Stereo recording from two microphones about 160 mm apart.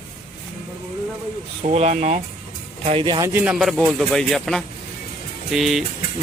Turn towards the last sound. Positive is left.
turn(degrees=0)  # may be behind; listen again after turning